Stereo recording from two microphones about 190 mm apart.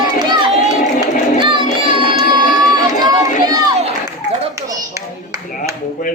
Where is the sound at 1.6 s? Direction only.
40° left (ahead or behind).